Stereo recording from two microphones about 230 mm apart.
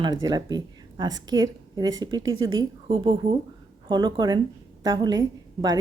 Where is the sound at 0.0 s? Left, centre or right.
Centre.